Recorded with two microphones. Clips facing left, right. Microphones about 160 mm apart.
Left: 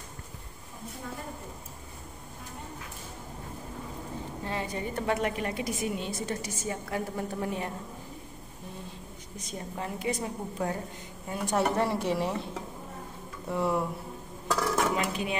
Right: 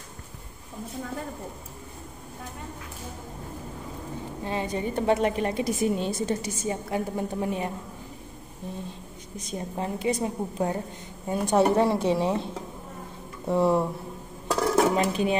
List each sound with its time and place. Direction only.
4.5 s a woman's voice: 20° right (ahead or behind)
9.8 s a woman's voice: 25° right (ahead or behind)
11.7 s a woman's voice: 15° right (ahead or behind)
13.5 s a woman's voice: 25° right (ahead or behind)
14.5 s dishes: 30° right (ahead or behind)